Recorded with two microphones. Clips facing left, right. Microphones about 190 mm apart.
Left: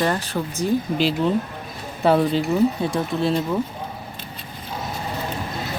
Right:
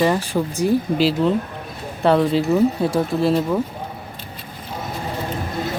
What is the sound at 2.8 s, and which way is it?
Speech, 25° right (ahead or behind).